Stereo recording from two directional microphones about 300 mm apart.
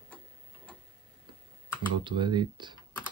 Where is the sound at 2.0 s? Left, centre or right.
Centre.